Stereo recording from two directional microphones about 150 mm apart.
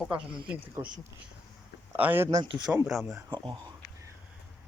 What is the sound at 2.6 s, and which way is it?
Speech, 5° right (ahead or behind).